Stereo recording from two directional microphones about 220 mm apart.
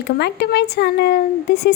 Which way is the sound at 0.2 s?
50° left (ahead or behind).